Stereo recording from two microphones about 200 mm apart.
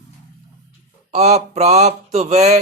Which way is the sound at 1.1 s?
35° right (ahead or behind).